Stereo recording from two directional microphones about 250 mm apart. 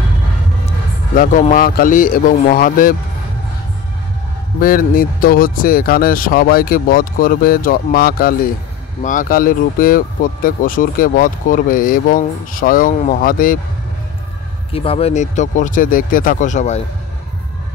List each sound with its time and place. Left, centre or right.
0.7 s a man's voice: left
4.6 s speech: left
14.7 s speech: left